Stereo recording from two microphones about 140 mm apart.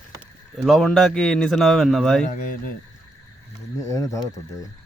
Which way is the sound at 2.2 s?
60° left (ahead or behind).